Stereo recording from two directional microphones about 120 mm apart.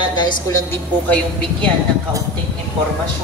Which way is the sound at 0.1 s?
40° left (ahead or behind).